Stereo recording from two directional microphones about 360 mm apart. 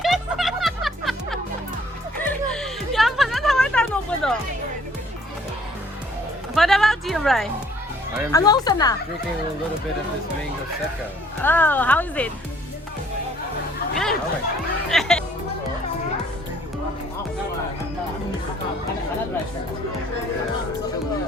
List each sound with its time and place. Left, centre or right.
0.0 s music: centre
6.5 s music: centre
8.3 s speech: centre
11.4 s speech: centre
13.9 s chatter: centre
14.8 s music: centre